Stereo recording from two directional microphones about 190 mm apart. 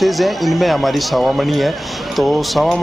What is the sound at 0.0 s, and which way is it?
Speech, centre (ahead or behind).